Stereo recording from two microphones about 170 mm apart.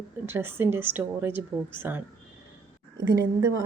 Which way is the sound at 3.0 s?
20° right (ahead or behind).